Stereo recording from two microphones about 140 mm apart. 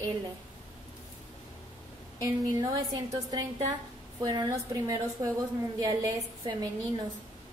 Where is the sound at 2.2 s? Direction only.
30° right (ahead or behind).